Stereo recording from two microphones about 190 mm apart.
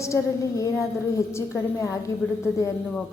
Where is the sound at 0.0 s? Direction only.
15° left (ahead or behind).